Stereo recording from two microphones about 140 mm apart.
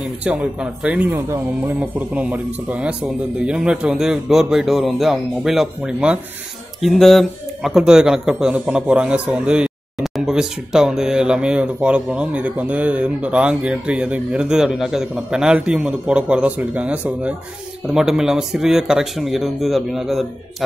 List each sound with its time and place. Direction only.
0.0 s speech: 5° right (ahead or behind)